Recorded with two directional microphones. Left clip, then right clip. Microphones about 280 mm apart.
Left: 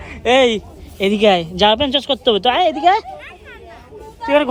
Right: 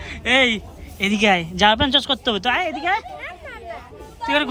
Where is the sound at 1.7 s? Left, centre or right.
Left.